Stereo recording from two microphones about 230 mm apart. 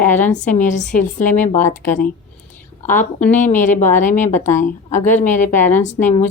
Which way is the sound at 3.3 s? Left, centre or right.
Left.